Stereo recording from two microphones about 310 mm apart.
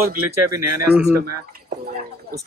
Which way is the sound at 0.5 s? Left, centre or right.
Right.